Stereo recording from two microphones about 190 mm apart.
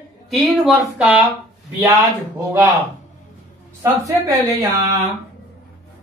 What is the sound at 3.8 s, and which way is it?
Speech, 15° right (ahead or behind).